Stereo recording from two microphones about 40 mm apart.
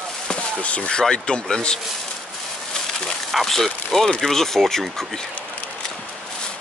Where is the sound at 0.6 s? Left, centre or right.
Left.